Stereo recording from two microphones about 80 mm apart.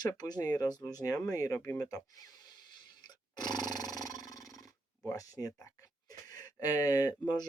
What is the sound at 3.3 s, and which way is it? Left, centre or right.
Roar, left.